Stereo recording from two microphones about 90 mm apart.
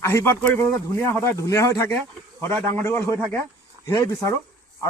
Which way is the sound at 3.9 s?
40° left (ahead or behind).